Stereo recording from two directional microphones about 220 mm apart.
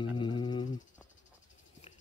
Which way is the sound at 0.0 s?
20° left (ahead or behind).